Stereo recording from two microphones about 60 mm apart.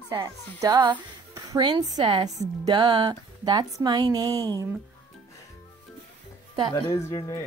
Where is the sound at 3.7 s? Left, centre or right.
Right.